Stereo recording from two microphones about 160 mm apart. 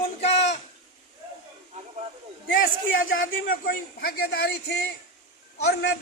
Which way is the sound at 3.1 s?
65° left (ahead or behind).